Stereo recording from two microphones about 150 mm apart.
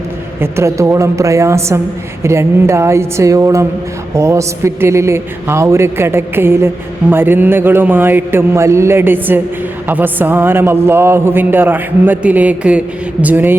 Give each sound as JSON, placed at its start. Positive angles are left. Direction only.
{"t": 0.3, "sound": "a man's voice", "side_deg": -15}